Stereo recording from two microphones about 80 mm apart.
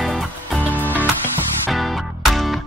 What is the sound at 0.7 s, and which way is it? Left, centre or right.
Music, left.